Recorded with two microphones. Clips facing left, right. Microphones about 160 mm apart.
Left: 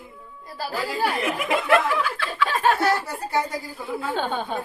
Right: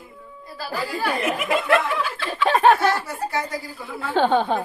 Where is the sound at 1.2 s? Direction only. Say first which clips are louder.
Right 2 dB; 20° right (ahead or behind).